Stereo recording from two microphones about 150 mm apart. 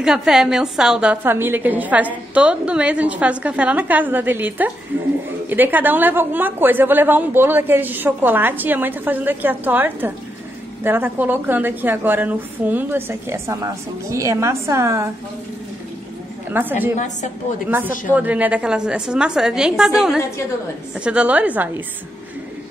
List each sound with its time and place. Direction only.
0.0 s a woman's voice: 5° right (ahead or behind)
16.4 s a woman's voice: 15° right (ahead or behind)
20.9 s a woman's voice: 5° right (ahead or behind)